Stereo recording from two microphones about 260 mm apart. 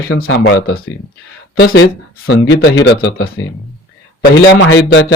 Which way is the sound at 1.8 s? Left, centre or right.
Left.